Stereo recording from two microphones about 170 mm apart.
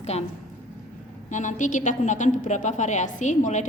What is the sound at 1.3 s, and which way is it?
A woman's voice, 45° left (ahead or behind).